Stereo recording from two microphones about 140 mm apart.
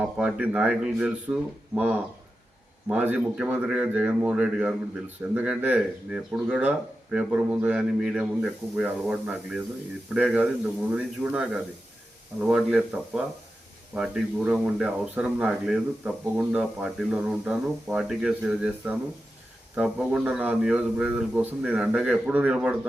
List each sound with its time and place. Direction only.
0.0 s speech: 10° right (ahead or behind)